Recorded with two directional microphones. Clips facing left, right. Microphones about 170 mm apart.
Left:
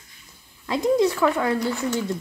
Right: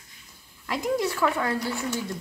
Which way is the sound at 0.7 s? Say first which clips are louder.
Left 6 dB; 25° left (ahead or behind).